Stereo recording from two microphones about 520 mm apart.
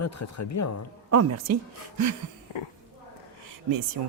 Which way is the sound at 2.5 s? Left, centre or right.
Left.